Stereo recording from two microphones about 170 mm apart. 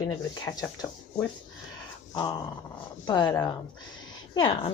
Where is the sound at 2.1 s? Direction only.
25° left (ahead or behind).